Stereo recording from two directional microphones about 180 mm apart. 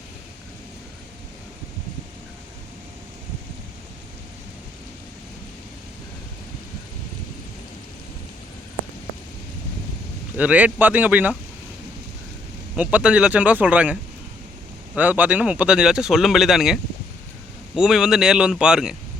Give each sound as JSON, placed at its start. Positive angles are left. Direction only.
{"t": 10.3, "sound": "speech", "side_deg": -10}
{"t": 12.7, "sound": "speech", "side_deg": -5}